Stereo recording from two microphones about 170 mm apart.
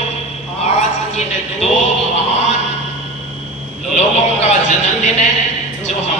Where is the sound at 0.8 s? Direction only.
40° left (ahead or behind).